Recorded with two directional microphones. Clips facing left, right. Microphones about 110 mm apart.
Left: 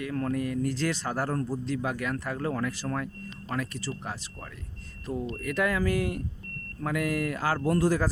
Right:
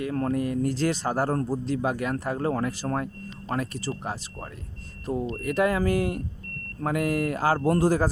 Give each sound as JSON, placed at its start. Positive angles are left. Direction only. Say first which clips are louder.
{"t": 0.0, "sound": "speech", "louder": "right 3 dB", "side_deg": -30}